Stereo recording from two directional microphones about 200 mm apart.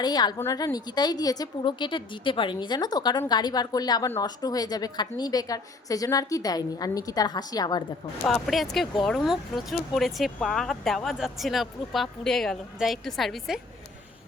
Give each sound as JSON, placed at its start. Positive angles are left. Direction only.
{"t": 0.0, "sound": "a woman's voice", "side_deg": 20}
{"t": 8.3, "sound": "speech", "side_deg": 0}